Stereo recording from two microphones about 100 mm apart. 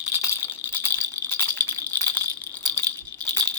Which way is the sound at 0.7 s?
20° left (ahead or behind).